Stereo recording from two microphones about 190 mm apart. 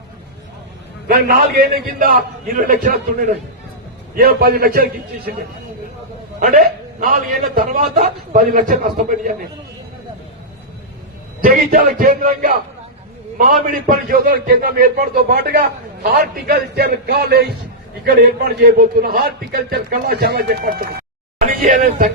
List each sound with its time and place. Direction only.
1.0 s a man's voice: 45° right (ahead or behind)
4.1 s a man's voice: 55° right (ahead or behind)
7.0 s a man's voice: 45° right (ahead or behind)
11.4 s a man's voice: 45° right (ahead or behind)